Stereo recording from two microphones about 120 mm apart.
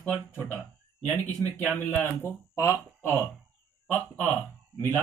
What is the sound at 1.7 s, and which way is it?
Speech, 15° left (ahead or behind).